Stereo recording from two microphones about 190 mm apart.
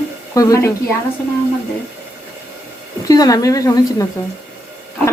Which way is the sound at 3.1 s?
20° left (ahead or behind).